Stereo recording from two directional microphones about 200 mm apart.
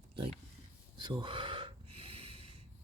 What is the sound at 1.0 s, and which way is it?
Gasp, 25° right (ahead or behind).